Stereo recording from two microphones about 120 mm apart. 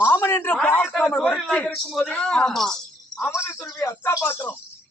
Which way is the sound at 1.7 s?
Centre (ahead or behind).